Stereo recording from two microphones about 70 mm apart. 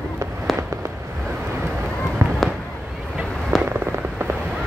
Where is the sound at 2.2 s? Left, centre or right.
Right.